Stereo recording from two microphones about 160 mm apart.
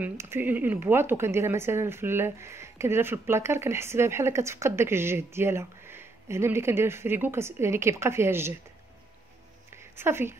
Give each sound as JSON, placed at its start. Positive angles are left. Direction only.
{"t": 0.0, "sound": "speech", "side_deg": -15}
{"t": 9.9, "sound": "speech", "side_deg": -15}